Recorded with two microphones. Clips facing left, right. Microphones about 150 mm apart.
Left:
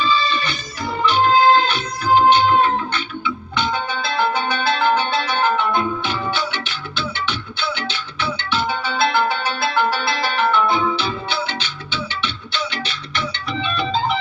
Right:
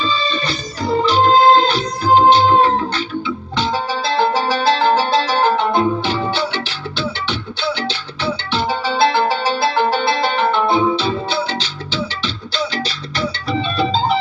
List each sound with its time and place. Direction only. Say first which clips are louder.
0.0 s organ: even; 35° right (ahead or behind)
8.2 s music: right 2 dB; 25° right (ahead or behind)
12.5 s music: right 4 dB; 35° right (ahead or behind)